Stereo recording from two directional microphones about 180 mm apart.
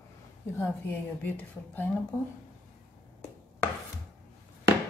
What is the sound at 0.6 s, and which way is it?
Speech, 10° left (ahead or behind).